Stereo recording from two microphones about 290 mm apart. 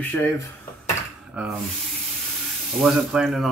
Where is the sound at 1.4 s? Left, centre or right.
Centre.